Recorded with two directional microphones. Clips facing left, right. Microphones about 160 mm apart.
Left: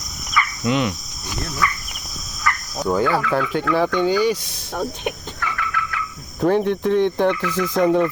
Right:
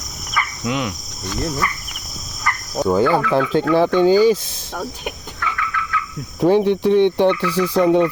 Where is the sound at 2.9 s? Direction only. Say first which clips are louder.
Right 3 dB; 25° right (ahead or behind).